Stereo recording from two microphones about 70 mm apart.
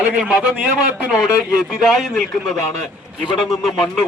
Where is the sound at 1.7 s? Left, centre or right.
Centre.